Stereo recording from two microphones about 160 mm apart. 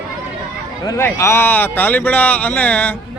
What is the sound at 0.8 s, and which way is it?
A man's voice, 15° left (ahead or behind).